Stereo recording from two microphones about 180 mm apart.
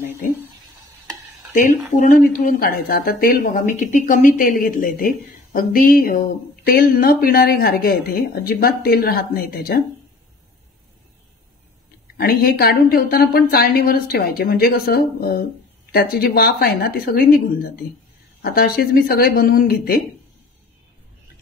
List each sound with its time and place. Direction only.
1.5 s speech: 45° left (ahead or behind)
12.2 s speech: 60° left (ahead or behind)